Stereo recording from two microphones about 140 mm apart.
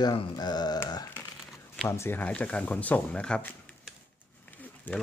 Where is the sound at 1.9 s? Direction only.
15° left (ahead or behind).